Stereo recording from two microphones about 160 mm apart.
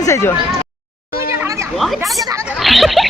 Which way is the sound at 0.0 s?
15° left (ahead or behind).